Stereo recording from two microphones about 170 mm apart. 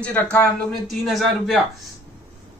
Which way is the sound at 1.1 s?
Centre (ahead or behind).